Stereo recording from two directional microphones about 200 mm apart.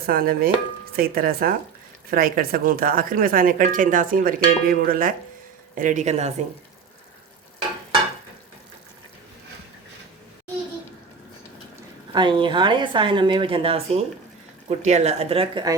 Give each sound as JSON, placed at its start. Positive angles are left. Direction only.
{"t": 0.0, "sound": "speech", "side_deg": -50}
{"t": 12.1, "sound": "a woman's voice", "side_deg": -25}